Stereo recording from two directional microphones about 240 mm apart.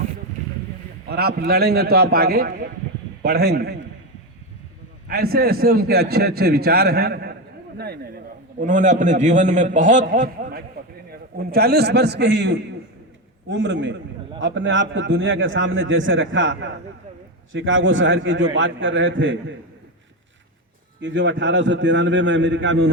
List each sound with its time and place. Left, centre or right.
1.0 s a man's voice: right
5.0 s a man's voice: right
21.0 s a man's voice: right